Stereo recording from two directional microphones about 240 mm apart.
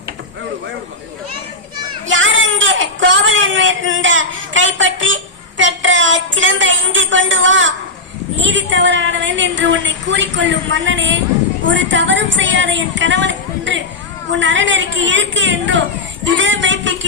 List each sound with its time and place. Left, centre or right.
2.0 s a sound: right
8.4 s a woman's voice: right
16.2 s music: right